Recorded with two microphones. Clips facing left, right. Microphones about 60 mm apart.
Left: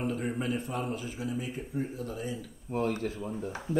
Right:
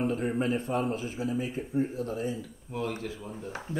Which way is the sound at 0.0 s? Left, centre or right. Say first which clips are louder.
Right 3 dB; right.